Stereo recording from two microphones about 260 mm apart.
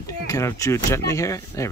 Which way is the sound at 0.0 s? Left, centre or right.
Centre.